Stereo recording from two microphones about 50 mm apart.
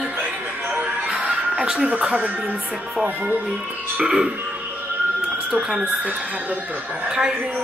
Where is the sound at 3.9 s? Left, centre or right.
Centre.